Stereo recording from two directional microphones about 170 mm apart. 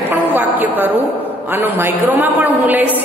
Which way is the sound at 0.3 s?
10° right (ahead or behind).